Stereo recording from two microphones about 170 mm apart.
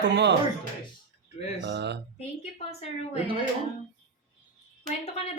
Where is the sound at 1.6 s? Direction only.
85° right.